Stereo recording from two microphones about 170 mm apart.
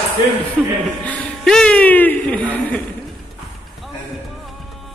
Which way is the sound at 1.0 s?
5° left (ahead or behind).